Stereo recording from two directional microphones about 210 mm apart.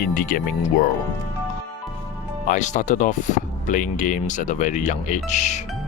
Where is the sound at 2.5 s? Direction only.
35° left (ahead or behind).